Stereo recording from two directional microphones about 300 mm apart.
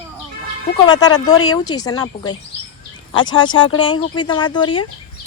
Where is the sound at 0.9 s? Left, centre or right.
Centre.